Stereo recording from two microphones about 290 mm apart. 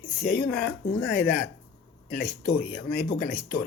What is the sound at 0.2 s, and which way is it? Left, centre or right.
Speech, left.